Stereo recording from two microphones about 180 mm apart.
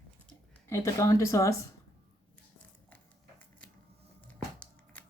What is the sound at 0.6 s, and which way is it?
Speech, 15° left (ahead or behind).